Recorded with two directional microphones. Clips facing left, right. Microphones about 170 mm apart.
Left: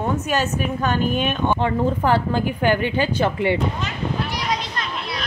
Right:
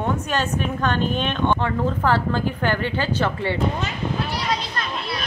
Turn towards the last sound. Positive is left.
turn(degrees=15)  # may be behind; listen again after turning